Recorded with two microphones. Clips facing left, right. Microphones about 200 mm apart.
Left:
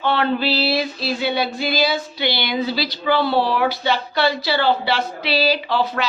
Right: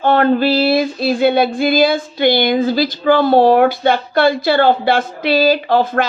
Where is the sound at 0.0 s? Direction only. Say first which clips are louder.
Right 7 dB; 45° right (ahead or behind).